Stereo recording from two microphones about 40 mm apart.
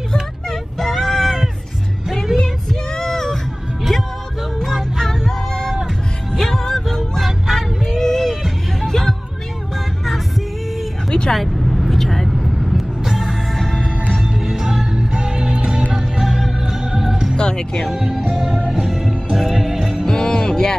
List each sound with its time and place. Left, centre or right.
0.7 s a sound: centre
2.7 s child singing: centre
4.6 s music: centre
11.1 s vehicle: centre
11.3 s vehicle: centre
13.0 s music: centre
13.6 s music: centre
14.3 s music: centre
16.0 s music: centre
17.4 s music: centre
17.8 s music: centre
20.1 s music: centre